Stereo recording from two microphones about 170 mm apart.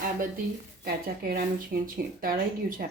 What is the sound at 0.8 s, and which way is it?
Speech, 65° right (ahead or behind).